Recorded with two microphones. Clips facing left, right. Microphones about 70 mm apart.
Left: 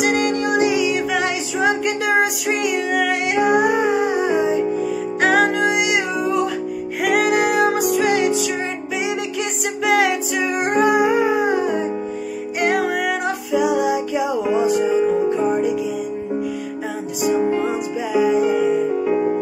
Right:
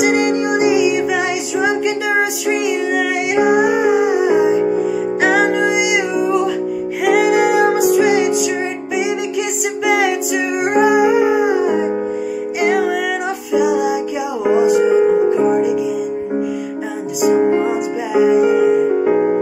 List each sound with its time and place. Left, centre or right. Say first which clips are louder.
0.0 s music: right 4 dB; centre
4.7 s music: right 4 dB; centre
9.8 s music: right 1 dB; centre
14.9 s music: right 5 dB; right
15.2 s music: right 4 dB; centre
17.3 s music: right 5 dB; right